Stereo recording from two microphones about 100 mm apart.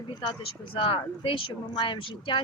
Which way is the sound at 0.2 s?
50° left (ahead or behind).